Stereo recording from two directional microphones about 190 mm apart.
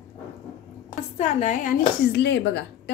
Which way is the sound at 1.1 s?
40° left (ahead or behind).